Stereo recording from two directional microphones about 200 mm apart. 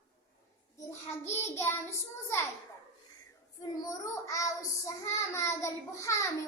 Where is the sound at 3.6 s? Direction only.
15° left (ahead or behind).